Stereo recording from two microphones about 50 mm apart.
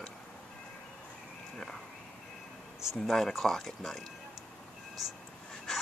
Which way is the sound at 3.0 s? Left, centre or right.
Centre.